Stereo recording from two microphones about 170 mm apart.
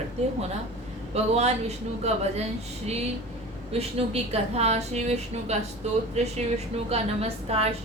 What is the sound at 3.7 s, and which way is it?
A woman's voice, 35° right (ahead or behind).